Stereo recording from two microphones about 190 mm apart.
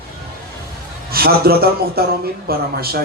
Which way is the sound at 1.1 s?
55° right (ahead or behind).